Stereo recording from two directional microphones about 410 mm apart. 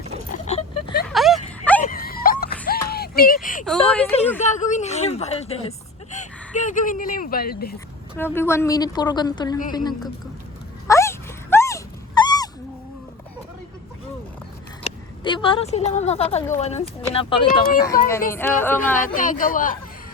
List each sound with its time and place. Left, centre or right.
0.4 s a sound: centre
1.1 s a sound: centre
1.8 s a sound: left
4.4 s speech: centre
8.1 s speech: centre
10.8 s dog: centre
14.8 s speech: centre
18.3 s speech: centre
18.9 s a man's voice: centre